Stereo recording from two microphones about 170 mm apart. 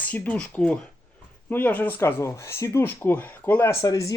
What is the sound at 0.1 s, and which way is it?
Speech, 10° left (ahead or behind).